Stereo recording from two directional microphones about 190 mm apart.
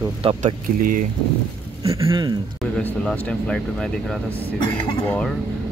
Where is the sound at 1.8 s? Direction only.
20° right (ahead or behind).